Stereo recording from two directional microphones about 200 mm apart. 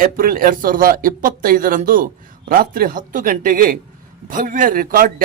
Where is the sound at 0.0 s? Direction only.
45° right (ahead or behind).